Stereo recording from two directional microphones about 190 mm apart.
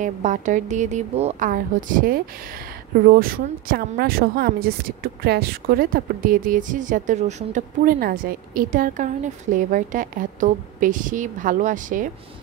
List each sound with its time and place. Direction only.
0.0 s a woman's voice: 40° right (ahead or behind)